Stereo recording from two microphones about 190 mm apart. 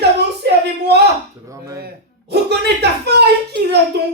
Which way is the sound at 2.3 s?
60° right (ahead or behind).